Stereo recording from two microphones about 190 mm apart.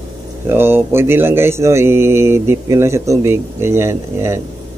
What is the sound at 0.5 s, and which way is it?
Speech, 10° right (ahead or behind).